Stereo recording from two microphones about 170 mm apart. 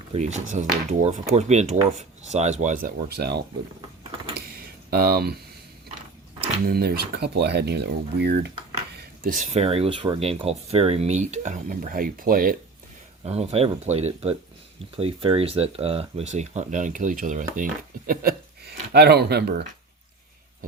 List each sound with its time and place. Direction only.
0.1 s speech: 40° right (ahead or behind); by 3.4 s 75° right (ahead or behind)
4.9 s speech: 65° right (ahead or behind)
6.7 s speech: 70° right (ahead or behind)
9.0 s speech: 55° right (ahead or behind)
13.2 s speech: 35° right (ahead or behind); by 19.6 s 75° right (ahead or behind)